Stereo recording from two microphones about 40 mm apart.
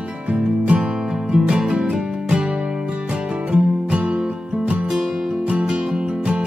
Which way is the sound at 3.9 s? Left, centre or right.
Right.